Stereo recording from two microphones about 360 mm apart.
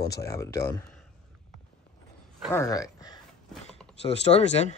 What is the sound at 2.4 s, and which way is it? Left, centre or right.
Speech, centre.